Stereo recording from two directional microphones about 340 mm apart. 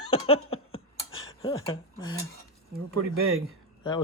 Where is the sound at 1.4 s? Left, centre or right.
Centre.